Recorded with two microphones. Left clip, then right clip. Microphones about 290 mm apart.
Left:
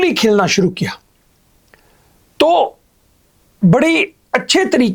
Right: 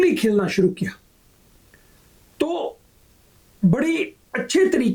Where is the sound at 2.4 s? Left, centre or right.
Left.